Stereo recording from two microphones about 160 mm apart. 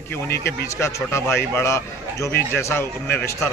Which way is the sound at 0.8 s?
15° left (ahead or behind).